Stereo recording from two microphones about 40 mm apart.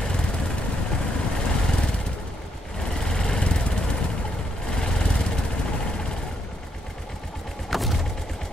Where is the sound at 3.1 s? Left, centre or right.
Left.